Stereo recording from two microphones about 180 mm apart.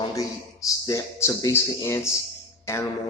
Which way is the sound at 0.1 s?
20° left (ahead or behind).